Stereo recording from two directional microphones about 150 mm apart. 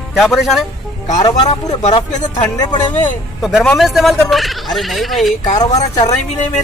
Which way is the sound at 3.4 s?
5° right (ahead or behind).